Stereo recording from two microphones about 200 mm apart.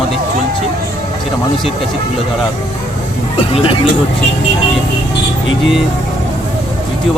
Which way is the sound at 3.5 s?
25° left (ahead or behind).